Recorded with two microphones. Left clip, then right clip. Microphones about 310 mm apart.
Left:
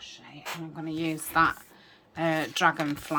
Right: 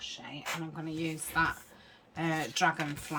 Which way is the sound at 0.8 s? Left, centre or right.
Centre.